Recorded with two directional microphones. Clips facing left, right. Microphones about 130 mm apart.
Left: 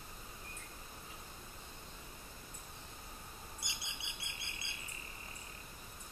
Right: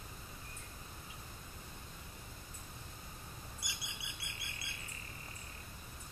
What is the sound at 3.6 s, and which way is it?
Squawk, 25° left (ahead or behind).